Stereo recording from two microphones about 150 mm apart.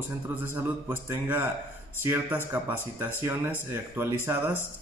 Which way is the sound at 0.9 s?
15° right (ahead or behind).